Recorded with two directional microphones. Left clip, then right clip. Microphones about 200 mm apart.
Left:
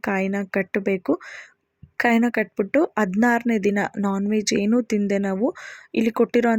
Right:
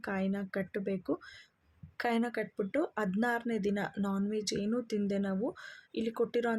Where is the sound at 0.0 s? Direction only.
35° left (ahead or behind).